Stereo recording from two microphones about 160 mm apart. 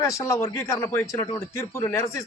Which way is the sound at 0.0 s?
20° left (ahead or behind).